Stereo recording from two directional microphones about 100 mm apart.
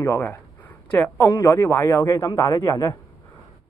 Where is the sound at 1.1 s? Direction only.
30° left (ahead or behind).